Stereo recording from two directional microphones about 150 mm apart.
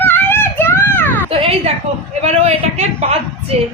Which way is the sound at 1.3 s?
40° right (ahead or behind).